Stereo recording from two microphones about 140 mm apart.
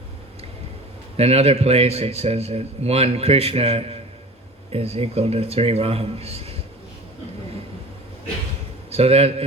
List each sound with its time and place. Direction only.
1.1 s speech: 45° right (ahead or behind)
8.9 s a man's voice: 45° right (ahead or behind)